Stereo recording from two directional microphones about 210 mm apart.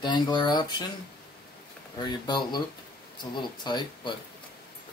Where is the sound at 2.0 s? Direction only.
20° left (ahead or behind).